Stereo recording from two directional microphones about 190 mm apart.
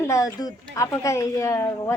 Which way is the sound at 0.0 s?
15° left (ahead or behind).